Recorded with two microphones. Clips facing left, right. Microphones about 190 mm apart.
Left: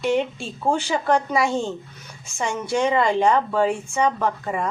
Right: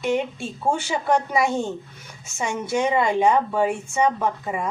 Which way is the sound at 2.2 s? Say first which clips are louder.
Left 1 dB; 5° right (ahead or behind).